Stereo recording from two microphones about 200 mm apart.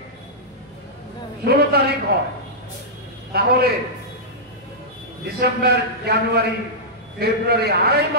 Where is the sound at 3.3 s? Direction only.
50° right (ahead or behind).